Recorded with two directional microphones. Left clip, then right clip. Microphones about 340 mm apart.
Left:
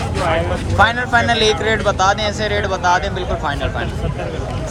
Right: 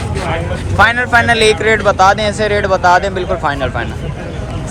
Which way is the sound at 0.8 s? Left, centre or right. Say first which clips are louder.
Right 4 dB; centre.